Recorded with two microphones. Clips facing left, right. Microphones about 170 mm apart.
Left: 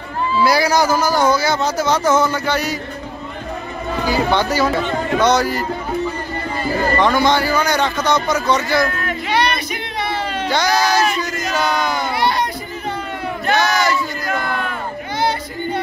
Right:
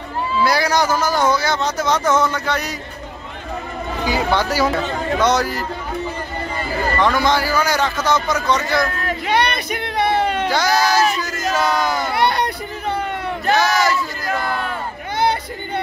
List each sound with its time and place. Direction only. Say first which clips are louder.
0.4 s speech: left 2 dB; 5° left (ahead or behind)
4.3 s speech: left 1 dB; 5° right (ahead or behind)
7.1 s speech: left 2 dB; centre (ahead or behind)
9.3 s a sound: even; 55° right (ahead or behind)
10.5 s speech: left 3 dB; centre (ahead or behind)
11.1 s battle cry: even; centre (ahead or behind)
12.2 s a sound: right 1 dB; 60° right (ahead or behind)
13.6 s speech: even; centre (ahead or behind)
15.1 s a sound: right 1 dB; 60° right (ahead or behind)